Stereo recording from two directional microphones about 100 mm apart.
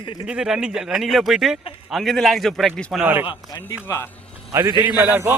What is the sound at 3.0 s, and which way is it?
Speech, 20° right (ahead or behind).